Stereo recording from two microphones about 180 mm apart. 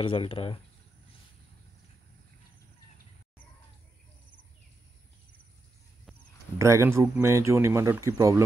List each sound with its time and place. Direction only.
0.0 s speech: 30° left (ahead or behind)
6.6 s speech: 15° right (ahead or behind)